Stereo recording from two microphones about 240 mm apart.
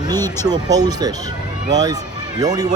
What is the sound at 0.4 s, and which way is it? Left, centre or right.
Speech, centre.